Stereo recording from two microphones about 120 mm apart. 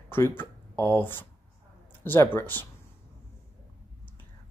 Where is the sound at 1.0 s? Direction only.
20° left (ahead or behind).